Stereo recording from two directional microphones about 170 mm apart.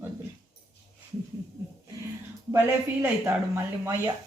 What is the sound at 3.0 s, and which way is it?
A woman's voice, 15° right (ahead or behind).